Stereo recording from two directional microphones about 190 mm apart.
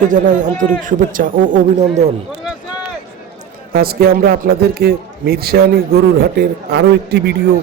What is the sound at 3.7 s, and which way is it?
A man's voice, 55° right (ahead or behind).